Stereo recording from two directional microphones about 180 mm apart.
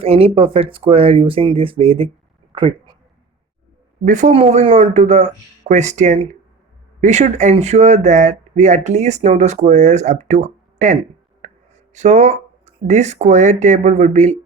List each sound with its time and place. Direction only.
0.0 s speech: 30° right (ahead or behind)
4.0 s speech: 40° right (ahead or behind)
11.9 s speech: 40° right (ahead or behind)